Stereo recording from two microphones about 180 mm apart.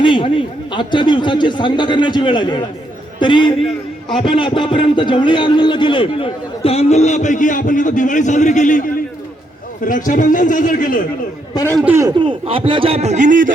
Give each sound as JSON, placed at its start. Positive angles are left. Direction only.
{"t": 0.0, "sound": "a man's voice", "side_deg": 25}
{"t": 11.5, "sound": "a man's voice", "side_deg": 15}
{"t": 11.9, "sound": "speech", "side_deg": -25}